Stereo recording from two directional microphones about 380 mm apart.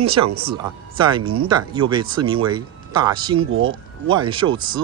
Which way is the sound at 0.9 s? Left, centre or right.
Centre.